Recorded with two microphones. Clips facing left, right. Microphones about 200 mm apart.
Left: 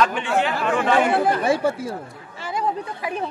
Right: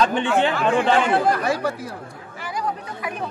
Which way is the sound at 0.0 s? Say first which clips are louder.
Right 2 dB; 30° right (ahead or behind).